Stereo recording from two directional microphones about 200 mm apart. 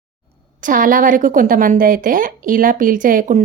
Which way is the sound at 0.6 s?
45° right (ahead or behind).